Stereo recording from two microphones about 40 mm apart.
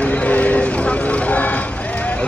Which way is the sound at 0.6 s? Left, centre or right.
Left.